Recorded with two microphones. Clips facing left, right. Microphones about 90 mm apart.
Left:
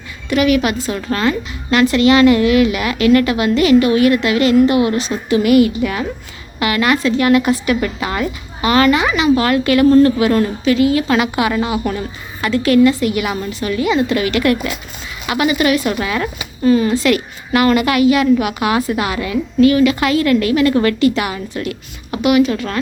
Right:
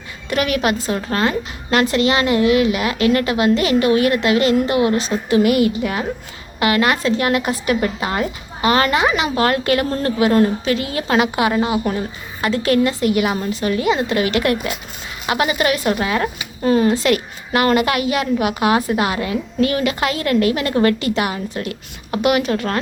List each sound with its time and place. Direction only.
0.3 s a woman's voice: 40° right (ahead or behind)